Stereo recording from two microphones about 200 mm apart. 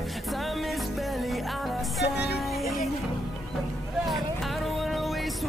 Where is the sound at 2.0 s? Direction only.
55° left (ahead or behind).